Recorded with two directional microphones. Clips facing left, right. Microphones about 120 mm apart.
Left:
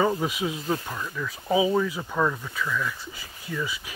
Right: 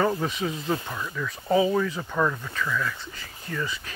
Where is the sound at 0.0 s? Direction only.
10° left (ahead or behind).